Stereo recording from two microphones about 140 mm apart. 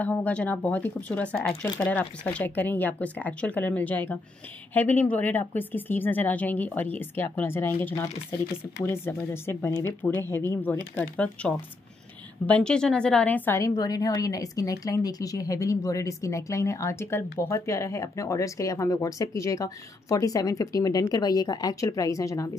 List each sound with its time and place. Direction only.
0.0 s a woman's voice: 10° left (ahead or behind)